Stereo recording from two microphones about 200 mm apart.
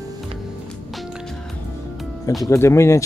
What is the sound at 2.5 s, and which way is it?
Speech, 15° left (ahead or behind).